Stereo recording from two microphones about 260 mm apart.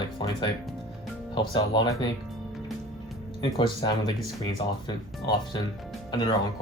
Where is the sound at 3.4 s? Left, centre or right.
Centre.